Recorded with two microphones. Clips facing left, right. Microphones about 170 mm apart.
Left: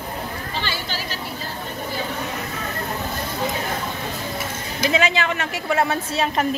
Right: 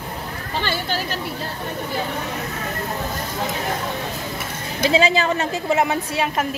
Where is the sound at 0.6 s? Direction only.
50° right (ahead or behind).